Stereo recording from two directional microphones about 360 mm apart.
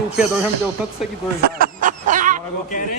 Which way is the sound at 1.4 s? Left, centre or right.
Right.